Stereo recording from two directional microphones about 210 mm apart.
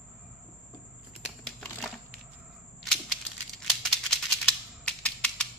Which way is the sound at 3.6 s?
5° left (ahead or behind).